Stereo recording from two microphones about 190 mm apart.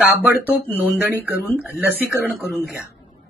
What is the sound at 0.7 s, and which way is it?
Speech, 10° right (ahead or behind).